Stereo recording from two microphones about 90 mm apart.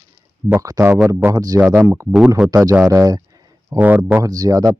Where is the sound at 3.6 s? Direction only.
20° right (ahead or behind).